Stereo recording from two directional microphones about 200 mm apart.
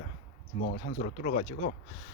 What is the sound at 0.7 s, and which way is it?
Speech, 40° left (ahead or behind).